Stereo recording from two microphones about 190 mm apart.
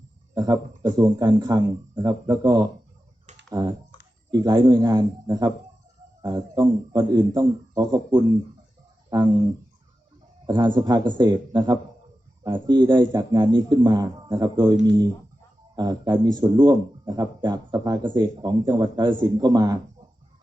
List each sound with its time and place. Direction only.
0.3 s a man's voice: 20° right (ahead or behind)
9.0 s a sound: 20° right (ahead or behind)
10.4 s a man's voice: 25° right (ahead or behind)